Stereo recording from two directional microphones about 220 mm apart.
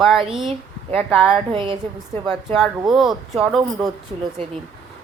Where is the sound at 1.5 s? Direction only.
25° right (ahead or behind).